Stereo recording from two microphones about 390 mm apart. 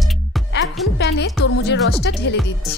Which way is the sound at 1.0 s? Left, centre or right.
Left.